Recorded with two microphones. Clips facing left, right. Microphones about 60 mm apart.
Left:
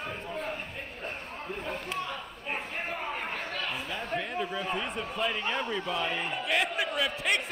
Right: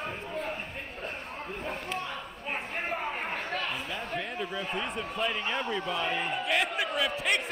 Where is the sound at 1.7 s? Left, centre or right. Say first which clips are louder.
Even; right.